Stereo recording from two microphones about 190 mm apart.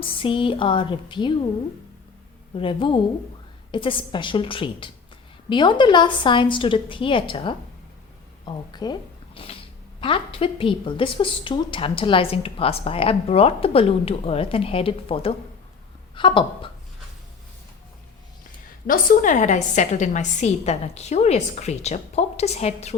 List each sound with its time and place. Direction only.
0.0 s a woman's voice: 25° left (ahead or behind)
2.6 s a woman's voice: 25° left (ahead or behind)
18.9 s a woman's voice: 45° left (ahead or behind)